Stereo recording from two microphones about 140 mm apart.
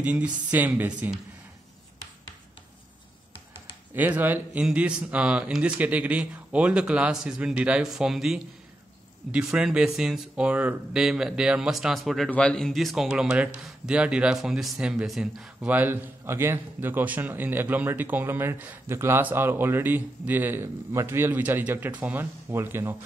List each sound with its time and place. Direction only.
0.0 s speech: 10° right (ahead or behind)
3.9 s speech: 15° right (ahead or behind)